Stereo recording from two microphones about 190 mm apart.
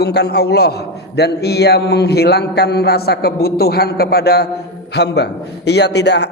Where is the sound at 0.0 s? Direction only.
60° left (ahead or behind).